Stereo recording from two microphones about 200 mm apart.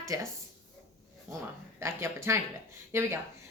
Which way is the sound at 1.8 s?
15° right (ahead or behind).